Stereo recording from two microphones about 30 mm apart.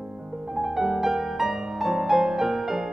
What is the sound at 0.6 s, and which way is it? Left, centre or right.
Music, centre.